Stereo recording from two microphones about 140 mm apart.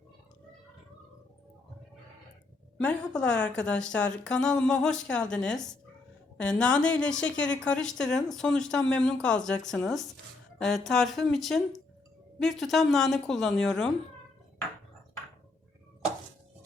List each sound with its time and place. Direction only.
2.7 s a woman's voice: 5° left (ahead or behind)